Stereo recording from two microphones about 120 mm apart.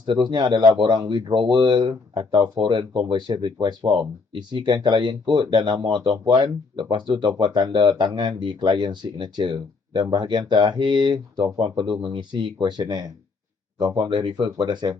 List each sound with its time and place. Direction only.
0.0 s speech: 40° right (ahead or behind)